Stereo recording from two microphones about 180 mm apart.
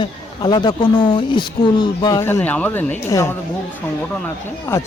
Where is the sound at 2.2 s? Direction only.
10° left (ahead or behind).